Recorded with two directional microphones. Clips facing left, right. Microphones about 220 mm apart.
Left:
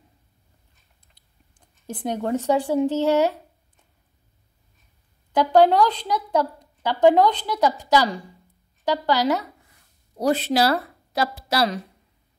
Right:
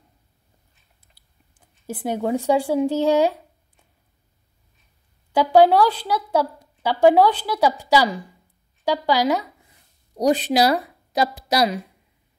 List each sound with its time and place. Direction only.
1.0 s speech: 5° right (ahead or behind)
5.3 s a woman's voice: 10° right (ahead or behind)